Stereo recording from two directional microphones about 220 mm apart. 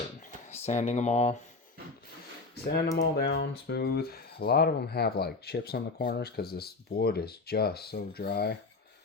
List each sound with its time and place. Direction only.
0.5 s speech: 30° left (ahead or behind)
2.9 s speech: 45° left (ahead or behind)